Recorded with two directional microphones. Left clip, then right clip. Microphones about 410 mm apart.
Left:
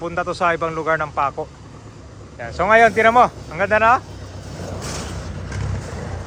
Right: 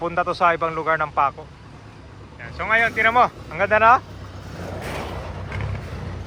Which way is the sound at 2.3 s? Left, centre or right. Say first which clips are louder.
Left 6 dB; centre.